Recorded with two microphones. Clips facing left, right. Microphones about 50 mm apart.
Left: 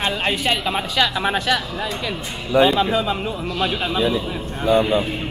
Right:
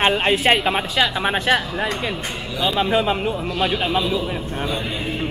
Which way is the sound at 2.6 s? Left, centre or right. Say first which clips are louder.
Left 8 dB; left.